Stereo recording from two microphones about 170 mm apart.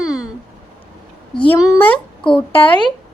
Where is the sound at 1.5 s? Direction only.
20° left (ahead or behind).